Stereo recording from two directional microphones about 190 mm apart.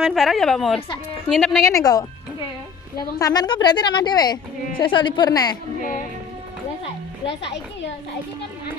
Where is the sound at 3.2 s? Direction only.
20° left (ahead or behind).